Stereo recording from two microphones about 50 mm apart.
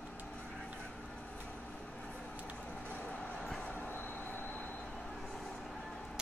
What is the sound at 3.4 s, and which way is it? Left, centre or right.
Train, centre.